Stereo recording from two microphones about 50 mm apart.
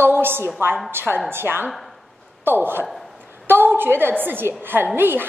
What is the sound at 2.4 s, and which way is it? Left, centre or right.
A woman's voice, right.